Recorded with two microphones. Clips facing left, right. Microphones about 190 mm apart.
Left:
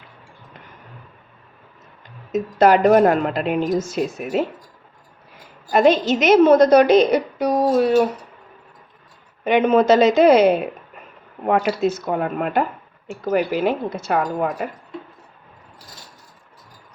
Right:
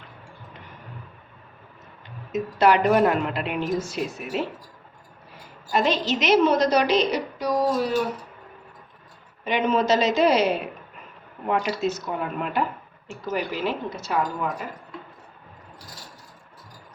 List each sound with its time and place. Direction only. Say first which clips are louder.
2.3 s a woman's voice: left 5 dB; 45° left (ahead or behind)
5.7 s a woman's voice: left 7 dB; 50° left (ahead or behind)
9.4 s a woman's voice: left 7 dB; 55° left (ahead or behind)
11.8 s a woman's voice: left 6 dB; 55° left (ahead or behind)